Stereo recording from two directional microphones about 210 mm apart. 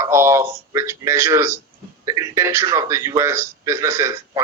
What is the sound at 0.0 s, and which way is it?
A man's voice, 15° right (ahead or behind).